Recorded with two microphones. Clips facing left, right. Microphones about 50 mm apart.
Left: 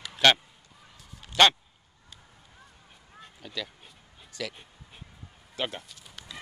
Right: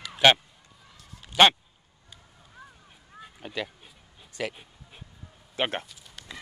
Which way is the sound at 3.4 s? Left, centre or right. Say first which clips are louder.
Right 3 dB; right.